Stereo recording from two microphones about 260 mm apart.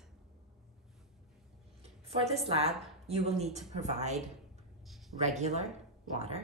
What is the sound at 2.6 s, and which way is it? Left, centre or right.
A woman's voice, right.